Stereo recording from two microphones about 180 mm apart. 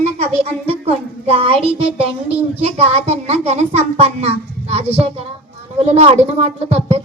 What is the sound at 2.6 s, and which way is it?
A child's voice, 35° right (ahead or behind).